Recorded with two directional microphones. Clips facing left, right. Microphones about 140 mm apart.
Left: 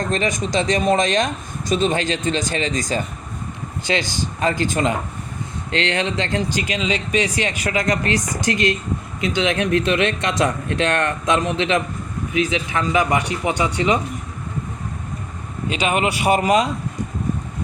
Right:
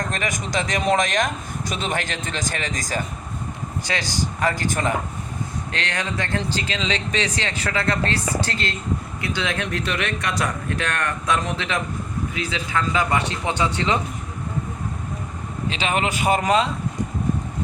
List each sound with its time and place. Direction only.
0.1 s speech: 20° left (ahead or behind)
16.2 s speech: 10° left (ahead or behind)